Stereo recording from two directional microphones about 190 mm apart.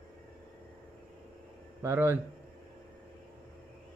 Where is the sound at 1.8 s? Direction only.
10° right (ahead or behind).